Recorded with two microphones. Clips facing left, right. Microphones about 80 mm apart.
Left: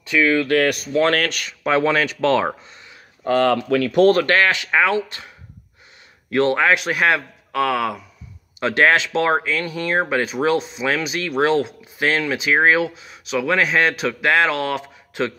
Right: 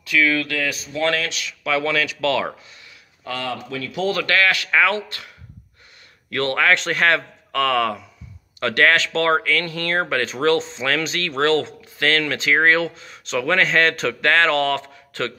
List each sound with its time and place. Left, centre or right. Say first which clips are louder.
0.0 s speech: left 2 dB; left
0.5 s speech: left 8 dB; left
3.4 s speech: left 10 dB; left
4.1 s speech: left 3 dB; left
6.3 s speech: left 2 dB; centre